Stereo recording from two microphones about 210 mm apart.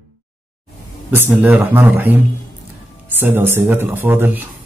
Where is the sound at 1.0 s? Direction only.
10° right (ahead or behind).